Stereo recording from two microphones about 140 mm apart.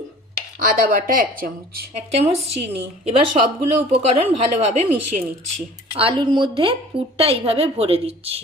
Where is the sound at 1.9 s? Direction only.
50° right (ahead or behind).